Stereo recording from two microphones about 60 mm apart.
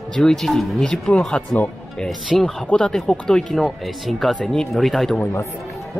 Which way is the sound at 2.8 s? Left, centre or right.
Centre.